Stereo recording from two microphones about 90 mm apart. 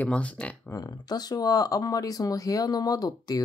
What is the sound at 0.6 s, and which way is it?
Speech, 45° left (ahead or behind).